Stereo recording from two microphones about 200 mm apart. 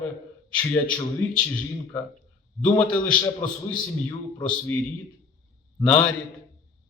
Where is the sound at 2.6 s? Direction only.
10° left (ahead or behind).